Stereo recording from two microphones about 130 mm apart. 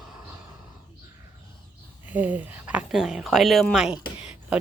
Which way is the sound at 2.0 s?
10° right (ahead or behind).